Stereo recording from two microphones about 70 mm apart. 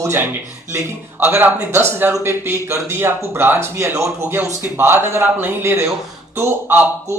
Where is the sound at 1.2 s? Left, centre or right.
Right.